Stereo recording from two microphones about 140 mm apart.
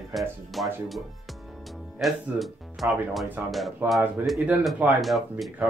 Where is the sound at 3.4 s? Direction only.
15° right (ahead or behind).